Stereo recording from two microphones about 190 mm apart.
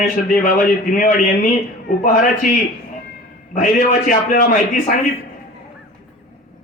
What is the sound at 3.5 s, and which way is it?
A man's voice, 45° left (ahead or behind).